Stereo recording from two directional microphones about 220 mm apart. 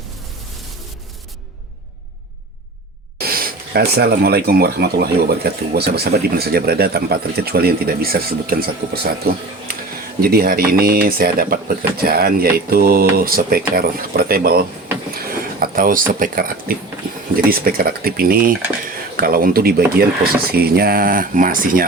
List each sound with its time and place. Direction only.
3.2 s speech: 45° right (ahead or behind)
10.2 s speech: 45° right (ahead or behind)